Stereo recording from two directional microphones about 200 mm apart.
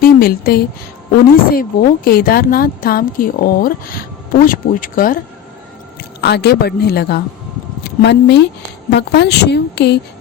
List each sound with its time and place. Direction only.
0.0 s a woman's voice: 50° left (ahead or behind)
6.2 s a woman's voice: 55° left (ahead or behind)